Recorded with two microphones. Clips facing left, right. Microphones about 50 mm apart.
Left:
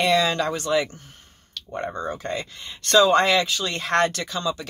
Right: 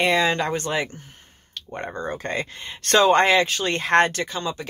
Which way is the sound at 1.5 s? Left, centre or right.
Right.